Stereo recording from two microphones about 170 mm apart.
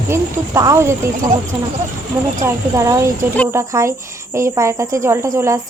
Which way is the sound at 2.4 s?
20° right (ahead or behind).